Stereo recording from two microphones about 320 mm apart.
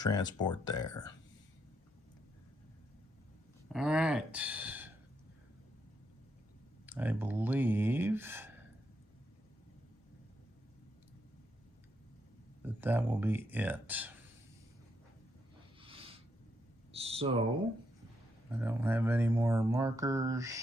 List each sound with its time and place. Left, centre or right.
0.0 s speech: centre
3.7 s speech: centre
6.8 s speech: centre
12.6 s speech: centre
15.8 s a sound: centre
18.6 s speech: centre